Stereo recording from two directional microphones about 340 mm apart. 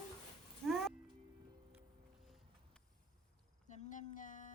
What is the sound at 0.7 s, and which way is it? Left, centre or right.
Music, centre.